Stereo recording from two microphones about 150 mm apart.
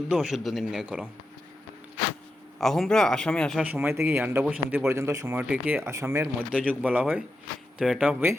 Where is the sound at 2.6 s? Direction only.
5° left (ahead or behind).